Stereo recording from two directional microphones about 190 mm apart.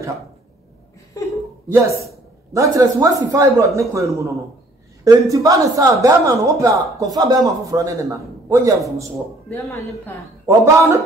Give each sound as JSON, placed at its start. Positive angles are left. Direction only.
{"t": 1.1, "sound": "speech", "side_deg": 15}
{"t": 1.7, "sound": "speech", "side_deg": -15}
{"t": 9.5, "sound": "speech", "side_deg": 15}
{"t": 10.5, "sound": "speech", "side_deg": -15}